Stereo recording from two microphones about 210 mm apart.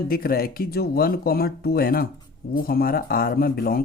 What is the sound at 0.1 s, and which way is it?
Speech, 45° left (ahead or behind).